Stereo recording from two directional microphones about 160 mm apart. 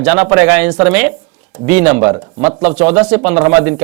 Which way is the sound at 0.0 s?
10° right (ahead or behind).